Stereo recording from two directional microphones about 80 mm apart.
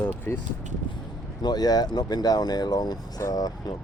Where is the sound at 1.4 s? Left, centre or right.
Left.